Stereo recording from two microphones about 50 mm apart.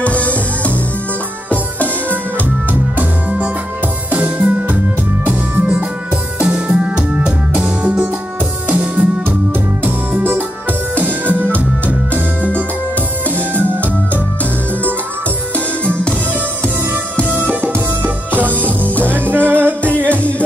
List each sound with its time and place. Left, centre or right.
0.0 s music: left
2.7 s music: right
9.8 s music: right
11.5 s music: left
13.3 s music: right
15.5 s music: left
16.6 s music: right
20.1 s music: left